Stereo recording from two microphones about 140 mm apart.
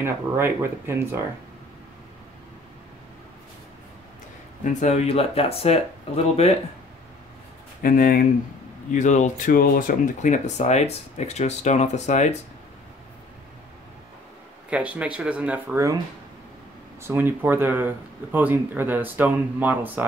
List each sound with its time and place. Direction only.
0.0 s speech: 15° right (ahead or behind)
4.6 s speech: 55° left (ahead or behind)
7.8 s speech: 90° left
8.9 s speech: 60° left (ahead or behind)
14.7 s speech: 10° right (ahead or behind)
17.0 s speech: 15° right (ahead or behind)